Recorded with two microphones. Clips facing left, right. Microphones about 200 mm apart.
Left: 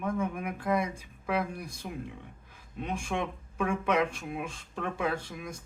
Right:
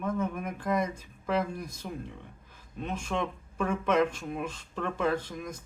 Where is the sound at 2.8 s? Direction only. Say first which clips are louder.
Right 1 dB; 15° left (ahead or behind).